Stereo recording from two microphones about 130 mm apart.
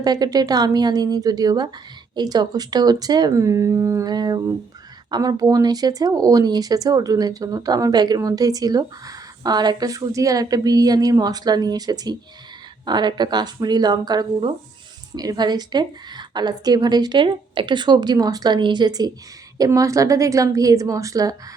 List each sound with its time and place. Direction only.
0.0 s a woman's voice: 30° right (ahead or behind)